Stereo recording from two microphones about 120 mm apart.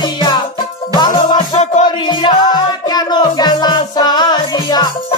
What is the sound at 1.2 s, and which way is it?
Music, 85° left.